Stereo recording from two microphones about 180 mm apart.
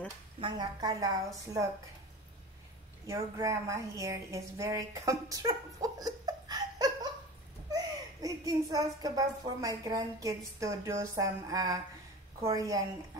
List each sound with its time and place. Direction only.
0.4 s speech: 25° right (ahead or behind)
3.1 s speech: 15° right (ahead or behind)